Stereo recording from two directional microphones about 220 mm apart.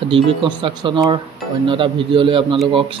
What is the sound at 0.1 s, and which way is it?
Speech, 20° right (ahead or behind).